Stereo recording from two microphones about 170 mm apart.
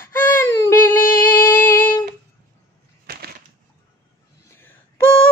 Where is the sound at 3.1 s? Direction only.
65° right (ahead or behind).